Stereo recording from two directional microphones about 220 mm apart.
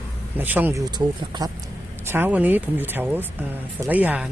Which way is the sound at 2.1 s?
10° right (ahead or behind).